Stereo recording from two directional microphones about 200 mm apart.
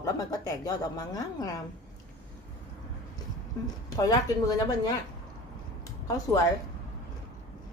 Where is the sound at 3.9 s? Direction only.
20° left (ahead or behind).